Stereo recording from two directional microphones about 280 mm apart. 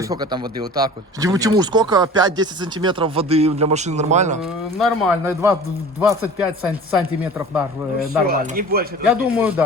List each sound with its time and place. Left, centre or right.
0.0 s speech: centre
4.4 s speech: centre
5.2 s speech: centre
8.3 s speech: right
9.0 s speech: centre